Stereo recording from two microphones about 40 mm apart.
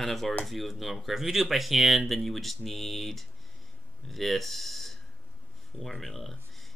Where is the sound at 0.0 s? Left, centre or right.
Centre.